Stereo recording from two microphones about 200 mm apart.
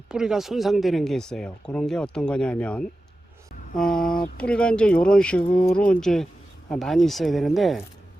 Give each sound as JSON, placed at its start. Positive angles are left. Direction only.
{"t": 0.1, "sound": "speech", "side_deg": -5}